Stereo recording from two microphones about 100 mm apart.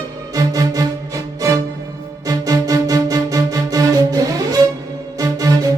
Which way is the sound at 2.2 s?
35° right (ahead or behind).